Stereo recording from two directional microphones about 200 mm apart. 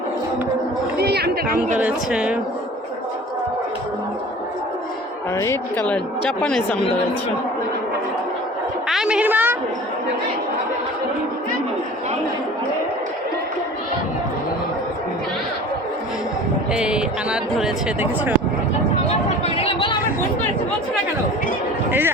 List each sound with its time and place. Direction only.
0.9 s speech: 55° right (ahead or behind)
1.8 s speech: 5° right (ahead or behind)
5.3 s a woman's voice: 15° left (ahead or behind)
8.9 s a sound: 5° right (ahead or behind)
16.7 s speech: 5° right (ahead or behind)
19.5 s chatter: 25° left (ahead or behind)
21.8 s a man's voice: 10° right (ahead or behind)